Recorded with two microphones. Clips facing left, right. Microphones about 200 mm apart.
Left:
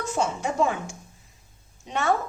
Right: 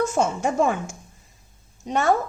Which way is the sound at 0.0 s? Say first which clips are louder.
Right 5 dB; 45° right (ahead or behind).